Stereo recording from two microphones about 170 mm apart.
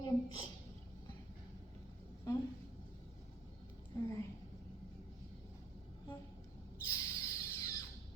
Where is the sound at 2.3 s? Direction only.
20° left (ahead or behind).